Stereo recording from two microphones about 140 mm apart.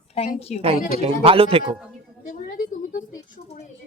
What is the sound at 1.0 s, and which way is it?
Speech, 40° right (ahead or behind).